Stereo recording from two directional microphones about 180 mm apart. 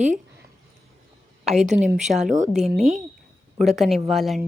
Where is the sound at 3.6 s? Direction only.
Centre (ahead or behind).